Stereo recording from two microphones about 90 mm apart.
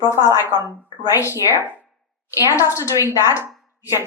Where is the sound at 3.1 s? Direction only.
30° right (ahead or behind).